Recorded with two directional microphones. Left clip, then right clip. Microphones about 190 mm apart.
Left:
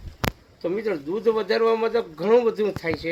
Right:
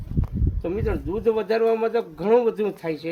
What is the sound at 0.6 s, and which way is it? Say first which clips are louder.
A man's voice: left 2 dB; 20° right (ahead or behind).